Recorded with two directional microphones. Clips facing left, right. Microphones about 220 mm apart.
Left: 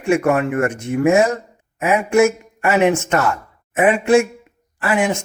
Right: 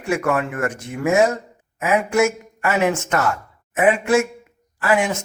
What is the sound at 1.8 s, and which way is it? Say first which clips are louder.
Speech: left 3 dB; 25° left (ahead or behind).